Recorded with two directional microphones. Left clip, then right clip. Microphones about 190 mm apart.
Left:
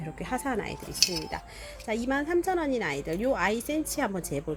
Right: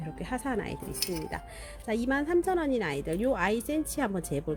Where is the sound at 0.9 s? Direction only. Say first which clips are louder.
Left 8 dB; 35° right (ahead or behind).